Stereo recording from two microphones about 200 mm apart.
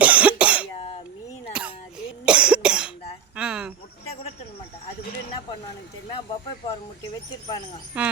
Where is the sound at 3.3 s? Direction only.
5° right (ahead or behind).